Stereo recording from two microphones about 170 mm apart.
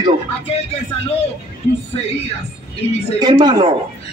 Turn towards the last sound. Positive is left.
turn(degrees=-25)  # may be behind; listen again after turning